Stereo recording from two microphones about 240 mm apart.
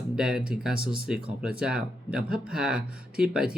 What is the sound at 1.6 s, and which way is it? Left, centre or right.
Speech, centre.